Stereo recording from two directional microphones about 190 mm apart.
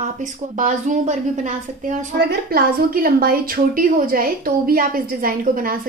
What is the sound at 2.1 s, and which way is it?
A woman's voice, 60° right (ahead or behind).